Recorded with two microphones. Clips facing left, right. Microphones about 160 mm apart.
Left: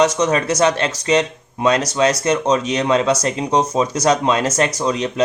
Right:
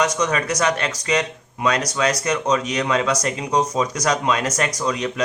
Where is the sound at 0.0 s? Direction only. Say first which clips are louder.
Left 5 dB; 25° left (ahead or behind).